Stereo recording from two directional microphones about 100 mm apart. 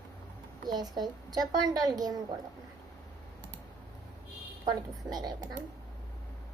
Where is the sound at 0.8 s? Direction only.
45° right (ahead or behind).